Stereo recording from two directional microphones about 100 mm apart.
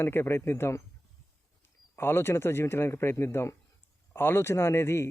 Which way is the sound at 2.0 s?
25° left (ahead or behind).